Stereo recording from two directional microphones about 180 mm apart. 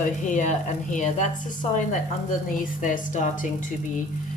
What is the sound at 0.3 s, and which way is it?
Speech, 45° left (ahead or behind).